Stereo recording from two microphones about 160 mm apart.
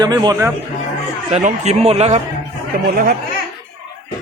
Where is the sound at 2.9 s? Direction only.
65° right (ahead or behind).